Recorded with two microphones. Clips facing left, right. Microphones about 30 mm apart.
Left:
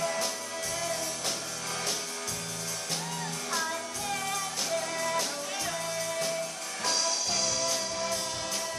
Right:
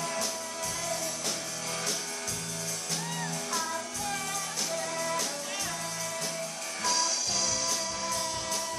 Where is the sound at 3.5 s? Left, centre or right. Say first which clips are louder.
Left 3 dB; centre.